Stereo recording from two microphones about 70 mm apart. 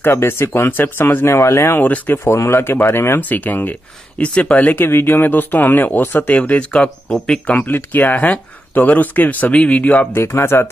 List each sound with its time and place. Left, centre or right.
0.0 s speech: left
1.8 s speech: left
2.2 s speech: left
3.2 s speech: left
4.8 s speech: left; by 7.5 s centre
7.5 s speech: left
10.1 s speech: left